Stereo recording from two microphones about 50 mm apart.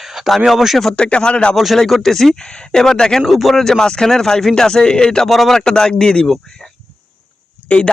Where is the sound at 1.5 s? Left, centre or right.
Centre.